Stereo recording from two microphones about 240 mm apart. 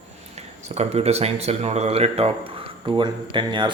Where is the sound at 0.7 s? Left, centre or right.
Right.